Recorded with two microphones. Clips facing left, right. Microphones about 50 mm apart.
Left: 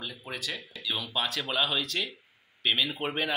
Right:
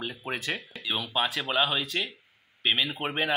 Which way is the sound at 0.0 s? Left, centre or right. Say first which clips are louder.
Right 4 dB; right.